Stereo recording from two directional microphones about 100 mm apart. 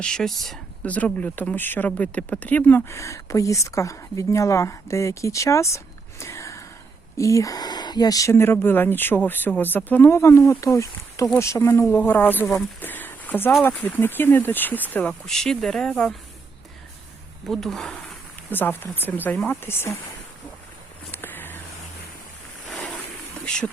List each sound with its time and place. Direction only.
0.0 s speech: 5° left (ahead or behind)
0.9 s speech: 15° left (ahead or behind)
15.3 s speech: 5° left (ahead or behind)
17.4 s speech: 5° left (ahead or behind)
18.5 s speech: 20° left (ahead or behind)
21.1 s a sound: 20° left (ahead or behind)
22.7 s a sound: centre (ahead or behind)